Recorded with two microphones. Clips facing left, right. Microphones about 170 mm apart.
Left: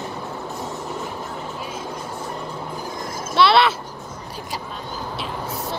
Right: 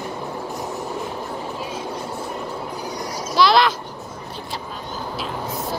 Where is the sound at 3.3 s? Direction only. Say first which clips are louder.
Even; centre (ahead or behind).